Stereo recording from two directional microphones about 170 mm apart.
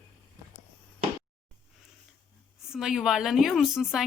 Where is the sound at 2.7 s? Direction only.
Centre (ahead or behind).